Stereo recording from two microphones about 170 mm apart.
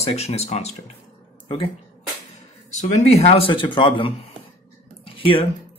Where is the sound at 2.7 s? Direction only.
40° left (ahead or behind).